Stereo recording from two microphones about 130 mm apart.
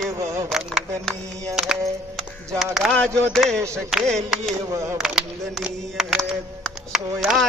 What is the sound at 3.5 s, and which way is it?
Speech, 20° right (ahead or behind).